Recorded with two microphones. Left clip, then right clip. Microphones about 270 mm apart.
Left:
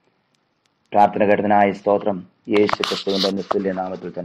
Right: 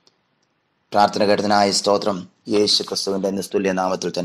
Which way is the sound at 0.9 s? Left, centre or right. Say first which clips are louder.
Left 1 dB; right.